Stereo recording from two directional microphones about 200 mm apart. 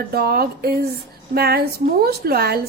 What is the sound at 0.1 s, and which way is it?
A woman's voice, 50° right (ahead or behind).